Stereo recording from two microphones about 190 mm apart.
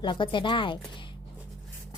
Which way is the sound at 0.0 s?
25° left (ahead or behind).